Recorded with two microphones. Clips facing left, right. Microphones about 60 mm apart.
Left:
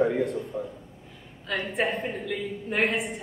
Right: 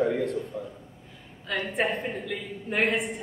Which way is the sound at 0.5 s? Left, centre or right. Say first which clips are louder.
Left 3 dB; left.